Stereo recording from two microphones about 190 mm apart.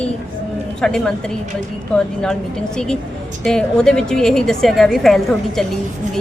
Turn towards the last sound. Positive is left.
turn(degrees=0)  # may be behind; listen again after turning